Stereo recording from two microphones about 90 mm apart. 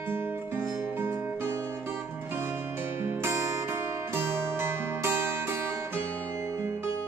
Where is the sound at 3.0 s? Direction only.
25° right (ahead or behind).